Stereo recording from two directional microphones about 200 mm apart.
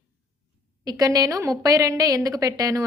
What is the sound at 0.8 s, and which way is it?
A woman's voice, 20° right (ahead or behind).